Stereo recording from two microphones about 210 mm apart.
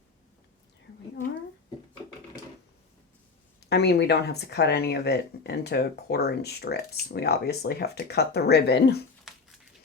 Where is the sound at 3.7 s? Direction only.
50° left (ahead or behind).